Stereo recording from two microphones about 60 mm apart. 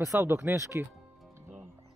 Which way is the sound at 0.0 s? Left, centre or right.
Right.